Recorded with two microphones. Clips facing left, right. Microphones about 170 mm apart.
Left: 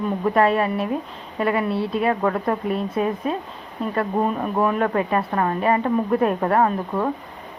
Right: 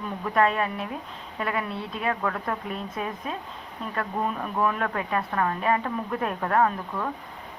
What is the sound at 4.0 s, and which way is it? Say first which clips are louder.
Speech: left 6 dB; 30° left (ahead or behind).